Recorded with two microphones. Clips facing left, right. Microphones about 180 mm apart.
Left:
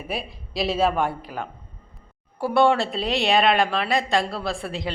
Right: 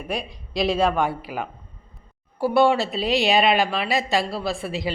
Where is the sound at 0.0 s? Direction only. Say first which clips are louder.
Right 2 dB; 5° left (ahead or behind).